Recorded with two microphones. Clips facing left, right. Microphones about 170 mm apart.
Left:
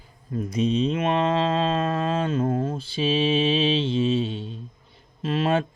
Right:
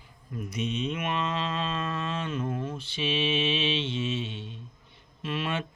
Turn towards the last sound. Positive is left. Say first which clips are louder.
# left 9 dB
turn(degrees=30)  # may be behind; listen again after turning